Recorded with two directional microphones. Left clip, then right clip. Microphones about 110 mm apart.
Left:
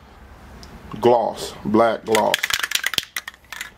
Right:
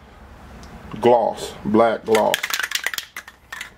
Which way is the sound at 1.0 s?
30° left (ahead or behind).